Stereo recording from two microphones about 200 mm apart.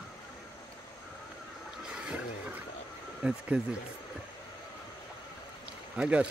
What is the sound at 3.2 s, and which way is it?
Speech, 5° right (ahead or behind).